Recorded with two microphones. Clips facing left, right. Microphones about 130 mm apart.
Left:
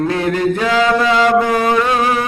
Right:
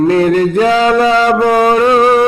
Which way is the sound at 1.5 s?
45° right (ahead or behind).